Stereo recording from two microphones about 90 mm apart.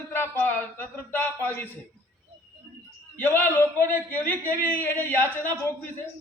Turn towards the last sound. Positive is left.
turn(degrees=20)  # may be behind; listen again after turning